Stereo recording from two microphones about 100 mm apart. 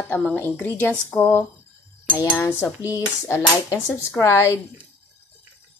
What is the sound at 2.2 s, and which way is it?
A woman's voice, 25° left (ahead or behind).